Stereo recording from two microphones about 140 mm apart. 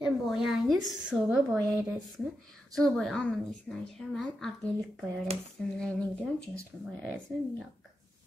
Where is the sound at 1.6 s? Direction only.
20° right (ahead or behind).